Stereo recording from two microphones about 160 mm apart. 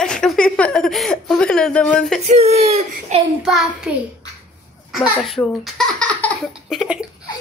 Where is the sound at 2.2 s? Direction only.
45° right (ahead or behind).